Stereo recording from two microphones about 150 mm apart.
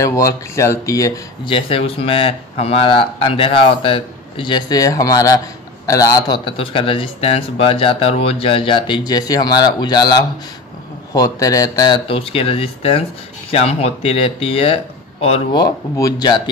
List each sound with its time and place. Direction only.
0.0 s speech: 20° left (ahead or behind)
1.5 s speech: 40° left (ahead or behind)
6.5 s speech: 35° left (ahead or behind)
15.5 s speech: 25° left (ahead or behind)